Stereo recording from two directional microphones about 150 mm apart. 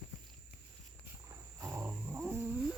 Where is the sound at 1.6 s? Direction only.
15° right (ahead or behind).